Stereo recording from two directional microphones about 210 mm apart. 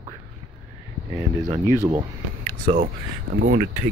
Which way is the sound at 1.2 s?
15° right (ahead or behind).